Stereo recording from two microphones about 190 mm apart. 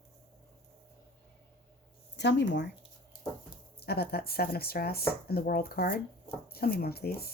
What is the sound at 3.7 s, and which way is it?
Speech, 55° left (ahead or behind).